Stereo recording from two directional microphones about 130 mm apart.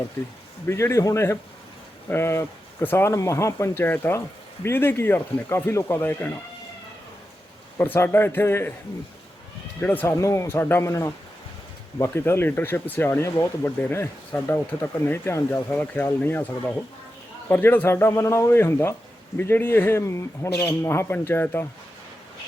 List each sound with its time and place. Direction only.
0.7 s speech: 20° left (ahead or behind)
7.8 s speech: 15° left (ahead or behind)
9.8 s speech: 15° left (ahead or behind)